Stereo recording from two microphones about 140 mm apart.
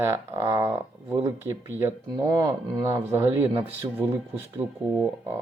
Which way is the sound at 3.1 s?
15° right (ahead or behind).